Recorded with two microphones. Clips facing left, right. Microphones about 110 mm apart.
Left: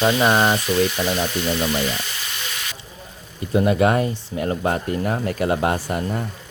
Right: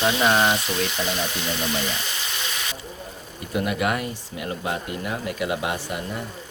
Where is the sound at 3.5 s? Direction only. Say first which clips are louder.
Left 7 dB; 30° left (ahead or behind).